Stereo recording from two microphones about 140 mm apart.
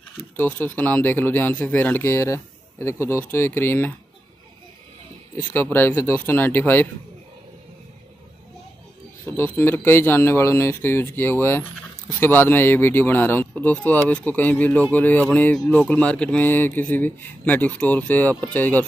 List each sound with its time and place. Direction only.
0.4 s speech: 10° left (ahead or behind)
5.4 s speech: 15° left (ahead or behind)
9.2 s speech: 15° left (ahead or behind)